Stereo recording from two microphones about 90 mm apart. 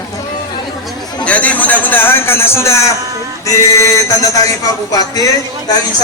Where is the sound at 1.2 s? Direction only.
15° left (ahead or behind); by 5.2 s 40° left (ahead or behind).